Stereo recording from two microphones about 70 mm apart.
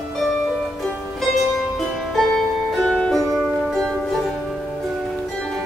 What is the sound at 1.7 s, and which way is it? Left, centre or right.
Music, centre.